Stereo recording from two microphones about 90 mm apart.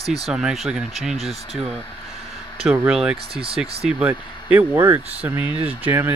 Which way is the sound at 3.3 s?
90° right.